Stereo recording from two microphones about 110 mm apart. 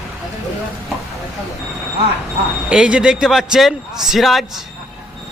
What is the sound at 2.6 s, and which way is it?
A man's voice, 10° right (ahead or behind).